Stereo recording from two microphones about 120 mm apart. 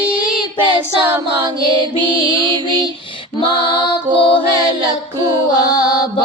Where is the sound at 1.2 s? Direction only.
40° right (ahead or behind).